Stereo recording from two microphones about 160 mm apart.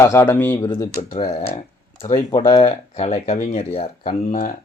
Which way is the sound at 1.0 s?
35° left (ahead or behind).